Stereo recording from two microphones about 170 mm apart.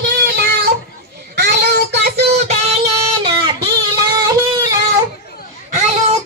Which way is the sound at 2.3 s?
40° right (ahead or behind).